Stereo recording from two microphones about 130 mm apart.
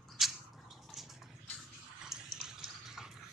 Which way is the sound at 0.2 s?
Centre (ahead or behind).